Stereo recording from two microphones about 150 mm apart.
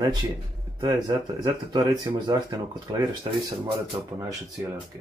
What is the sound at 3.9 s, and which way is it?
Speech, 20° right (ahead or behind).